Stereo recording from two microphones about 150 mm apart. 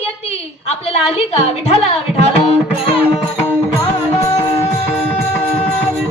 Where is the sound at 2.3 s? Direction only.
40° left (ahead or behind).